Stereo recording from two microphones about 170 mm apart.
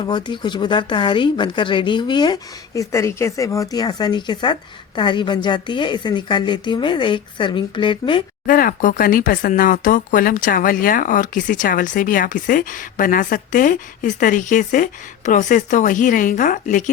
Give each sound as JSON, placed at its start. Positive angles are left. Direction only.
{"t": 0.0, "sound": "speech", "side_deg": 25}
{"t": 8.4, "sound": "speech", "side_deg": 55}